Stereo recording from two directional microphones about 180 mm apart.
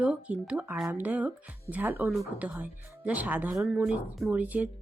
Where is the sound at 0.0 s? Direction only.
5° right (ahead or behind).